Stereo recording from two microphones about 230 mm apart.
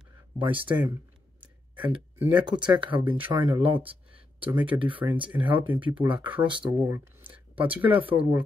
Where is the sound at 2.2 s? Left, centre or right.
Centre.